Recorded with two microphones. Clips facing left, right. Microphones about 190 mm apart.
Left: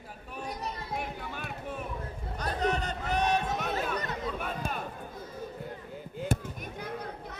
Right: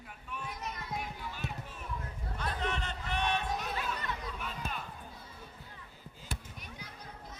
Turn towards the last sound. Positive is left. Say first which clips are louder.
# left 11 dB
turn(degrees=65)  # may be behind; listen again after turning